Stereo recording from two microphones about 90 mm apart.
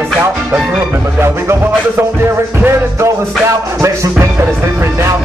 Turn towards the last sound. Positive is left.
turn(degrees=-35)  # may be behind; listen again after turning